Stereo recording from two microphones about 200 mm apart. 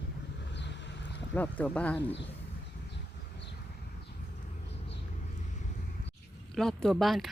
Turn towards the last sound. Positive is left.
turn(degrees=0)  # may be behind; listen again after turning